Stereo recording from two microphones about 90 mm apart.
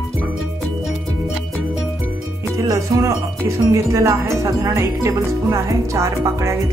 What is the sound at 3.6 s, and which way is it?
Speech, 40° right (ahead or behind).